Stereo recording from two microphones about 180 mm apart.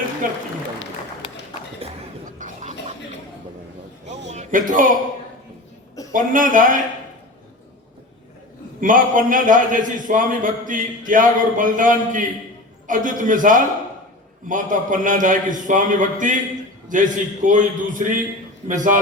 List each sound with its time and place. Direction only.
0.2 s a man's voice: 50° right (ahead or behind)
1.8 s a sound: 30° right (ahead or behind)
2.4 s a sound: 45° right (ahead or behind)
4.3 s music: 45° right (ahead or behind)
6.1 s a man's voice: 50° right (ahead or behind)
8.8 s a man's voice: 45° right (ahead or behind)